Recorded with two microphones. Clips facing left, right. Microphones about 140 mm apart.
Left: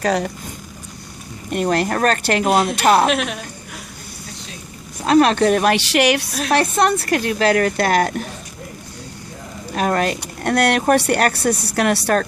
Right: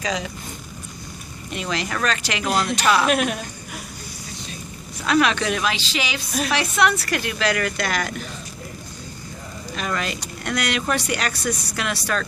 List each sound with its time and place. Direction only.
0.0 s speech: 60° left (ahead or behind)
1.5 s a woman's voice: 50° left (ahead or behind)
3.1 s speech: centre (ahead or behind)
5.0 s a woman's voice: 40° left (ahead or behind)
5.7 s speech: 70° left (ahead or behind)
6.5 s a woman's voice: 50° left (ahead or behind)
9.7 s speech: 50° left (ahead or behind)